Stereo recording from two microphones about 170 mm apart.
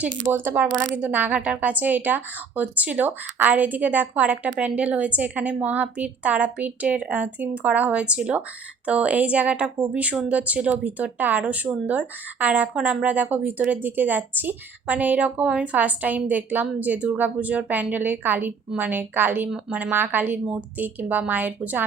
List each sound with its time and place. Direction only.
0.0 s speech: 10° right (ahead or behind)